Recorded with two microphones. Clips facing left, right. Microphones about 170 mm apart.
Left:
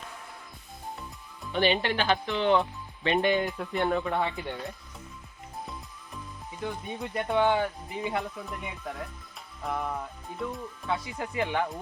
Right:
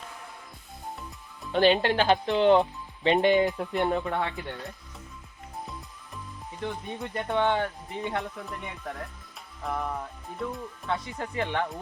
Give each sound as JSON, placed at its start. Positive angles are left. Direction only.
{"t": 1.8, "sound": "speech", "side_deg": -45}
{"t": 2.6, "sound": "speech", "side_deg": -20}
{"t": 4.2, "sound": "speech", "side_deg": 10}
{"t": 6.6, "sound": "speech", "side_deg": 5}